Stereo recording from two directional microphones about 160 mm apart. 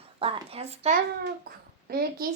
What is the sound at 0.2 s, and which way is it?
Speech, 35° right (ahead or behind).